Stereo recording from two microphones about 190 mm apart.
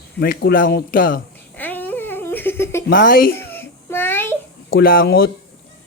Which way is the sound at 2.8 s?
50° left (ahead or behind).